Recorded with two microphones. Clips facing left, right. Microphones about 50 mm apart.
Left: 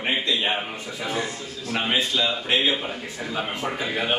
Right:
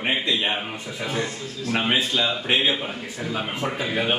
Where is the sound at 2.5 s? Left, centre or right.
Centre.